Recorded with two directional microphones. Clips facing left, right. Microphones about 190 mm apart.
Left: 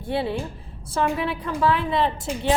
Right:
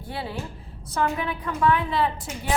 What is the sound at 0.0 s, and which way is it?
A woman's voice, 25° left (ahead or behind).